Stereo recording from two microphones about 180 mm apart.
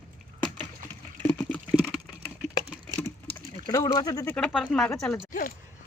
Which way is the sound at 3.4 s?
30° left (ahead or behind).